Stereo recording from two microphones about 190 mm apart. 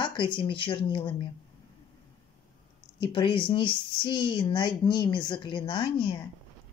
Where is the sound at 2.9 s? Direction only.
25° left (ahead or behind).